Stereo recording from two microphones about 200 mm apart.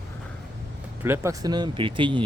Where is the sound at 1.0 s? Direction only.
15° right (ahead or behind).